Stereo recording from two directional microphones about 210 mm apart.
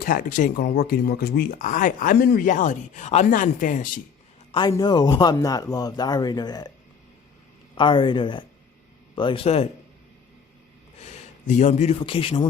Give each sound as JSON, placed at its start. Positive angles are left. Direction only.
{"t": 0.0, "sound": "speech", "side_deg": 40}
{"t": 4.5, "sound": "a man's voice", "side_deg": 20}
{"t": 7.8, "sound": "a man's voice", "side_deg": 20}
{"t": 11.0, "sound": "a man's voice", "side_deg": 35}